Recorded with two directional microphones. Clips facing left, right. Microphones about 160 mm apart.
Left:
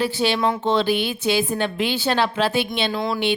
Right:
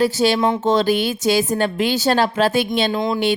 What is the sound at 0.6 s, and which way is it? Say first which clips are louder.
A woman's voice: right 3 dB; 45° right (ahead or behind).